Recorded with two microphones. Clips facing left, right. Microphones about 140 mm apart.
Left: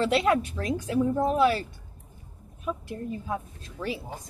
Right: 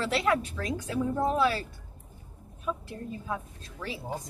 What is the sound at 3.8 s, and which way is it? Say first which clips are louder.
Speech: left 6 dB; 15° left (ahead or behind).